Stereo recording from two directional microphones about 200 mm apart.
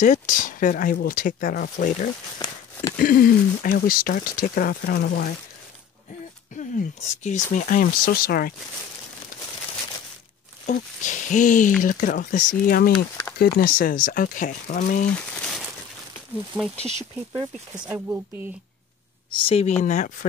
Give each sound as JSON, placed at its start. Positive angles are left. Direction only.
{"t": 0.0, "sound": "speech", "side_deg": 40}
{"t": 2.3, "sound": "speech", "side_deg": 20}
{"t": 3.0, "sound": "speech", "side_deg": 45}
{"t": 6.5, "sound": "speech", "side_deg": 40}
{"t": 10.7, "sound": "speech", "side_deg": 40}
{"t": 15.3, "sound": "crumpling", "side_deg": 0}
{"t": 16.5, "sound": "speech", "side_deg": 0}
{"t": 19.3, "sound": "speech", "side_deg": 30}